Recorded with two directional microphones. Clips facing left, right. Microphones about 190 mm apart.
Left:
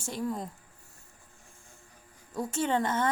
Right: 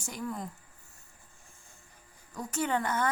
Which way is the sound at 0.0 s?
25° left (ahead or behind).